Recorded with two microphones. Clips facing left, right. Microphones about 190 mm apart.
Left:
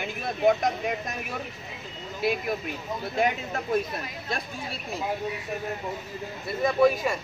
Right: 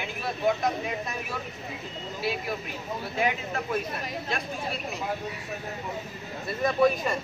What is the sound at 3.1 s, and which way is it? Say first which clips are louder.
Speech: left 2 dB; 45° left (ahead or behind).